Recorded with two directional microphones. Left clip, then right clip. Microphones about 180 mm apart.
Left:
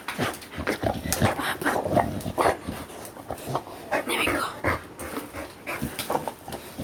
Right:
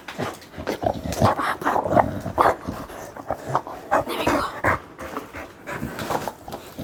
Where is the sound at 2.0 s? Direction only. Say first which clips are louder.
Right 5 dB; 25° right (ahead or behind).